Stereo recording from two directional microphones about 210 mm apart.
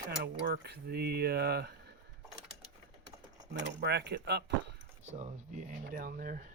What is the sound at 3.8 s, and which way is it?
Speech, 50° right (ahead or behind).